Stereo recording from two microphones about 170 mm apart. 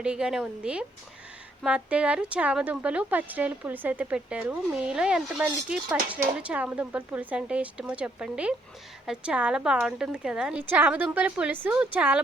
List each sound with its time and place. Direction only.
0.0 s a woman's voice: 5° right (ahead or behind)